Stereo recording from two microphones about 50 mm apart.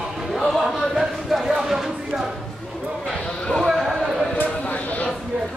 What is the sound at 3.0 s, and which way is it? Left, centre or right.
Basketball bounce, centre.